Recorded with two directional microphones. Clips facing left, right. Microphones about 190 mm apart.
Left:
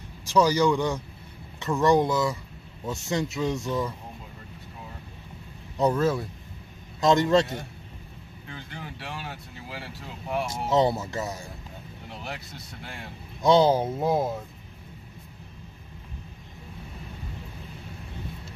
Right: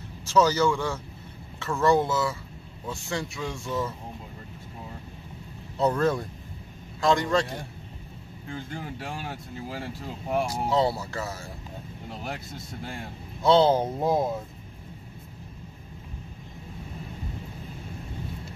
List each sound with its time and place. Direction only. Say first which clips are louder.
0.2 s speech: left 1 dB; 15° left (ahead or behind)
5.8 s speech: left 1 dB; 10° left (ahead or behind)
7.0 s speech: left 3 dB; 20° left (ahead or behind)
8.5 s speech: right 5 dB; 45° right (ahead or behind)
10.7 s speech: left 4 dB; 20° left (ahead or behind)
12.2 s speech: right 2 dB; 45° right (ahead or behind)
13.4 s speech: even; 10° left (ahead or behind)